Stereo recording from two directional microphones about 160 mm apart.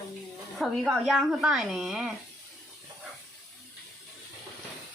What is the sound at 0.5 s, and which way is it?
Speech, centre (ahead or behind).